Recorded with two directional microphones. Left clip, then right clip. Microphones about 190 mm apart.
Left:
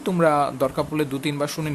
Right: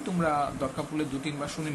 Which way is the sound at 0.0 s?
60° left (ahead or behind).